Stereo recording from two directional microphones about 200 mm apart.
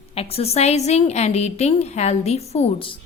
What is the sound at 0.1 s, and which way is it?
A woman's voice, 30° left (ahead or behind).